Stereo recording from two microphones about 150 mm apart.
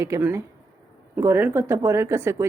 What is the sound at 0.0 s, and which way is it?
Speech, 15° right (ahead or behind).